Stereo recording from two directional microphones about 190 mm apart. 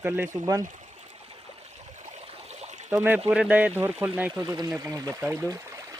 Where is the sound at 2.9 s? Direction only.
10° right (ahead or behind).